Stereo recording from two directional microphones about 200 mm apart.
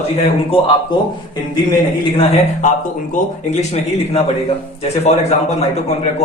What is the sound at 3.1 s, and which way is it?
A man's voice, 35° left (ahead or behind).